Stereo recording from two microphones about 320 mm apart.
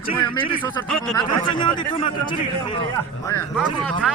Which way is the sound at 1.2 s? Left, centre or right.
Centre.